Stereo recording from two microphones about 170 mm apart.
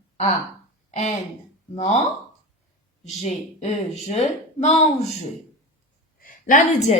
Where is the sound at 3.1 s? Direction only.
40° left (ahead or behind).